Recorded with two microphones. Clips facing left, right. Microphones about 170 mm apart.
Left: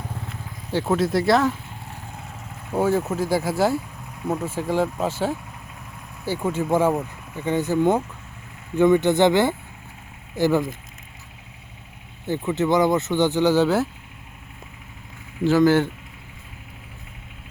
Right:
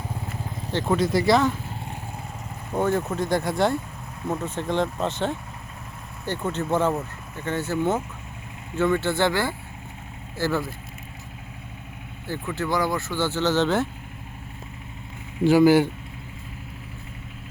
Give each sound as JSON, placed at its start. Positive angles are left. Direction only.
{"t": 0.7, "sound": "speech", "side_deg": 5}
{"t": 2.7, "sound": "speech", "side_deg": 5}
{"t": 12.2, "sound": "speech", "side_deg": 20}
{"t": 15.4, "sound": "speech", "side_deg": -10}